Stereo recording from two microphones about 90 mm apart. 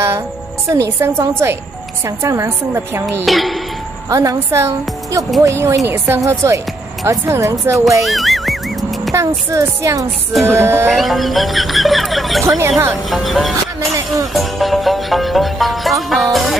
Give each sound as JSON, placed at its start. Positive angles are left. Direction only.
{"t": 0.7, "sound": "a woman's voice", "side_deg": -35}
{"t": 3.3, "sound": "a woman's voice", "side_deg": 0}
{"t": 4.1, "sound": "a woman's voice", "side_deg": -40}
{"t": 8.1, "sound": "music", "side_deg": 0}
{"t": 9.1, "sound": "a woman's voice", "side_deg": -35}
{"t": 10.9, "sound": "speech", "side_deg": 0}
{"t": 12.4, "sound": "speech", "side_deg": -25}
{"t": 13.1, "sound": "speech", "side_deg": 0}
{"t": 13.7, "sound": "music", "side_deg": -40}
{"t": 14.3, "sound": "music", "side_deg": 0}